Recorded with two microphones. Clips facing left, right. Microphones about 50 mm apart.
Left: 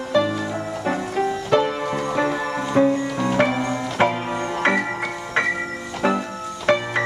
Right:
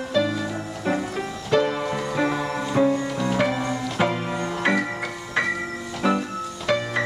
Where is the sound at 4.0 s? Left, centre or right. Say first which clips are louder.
Left 4 dB; left.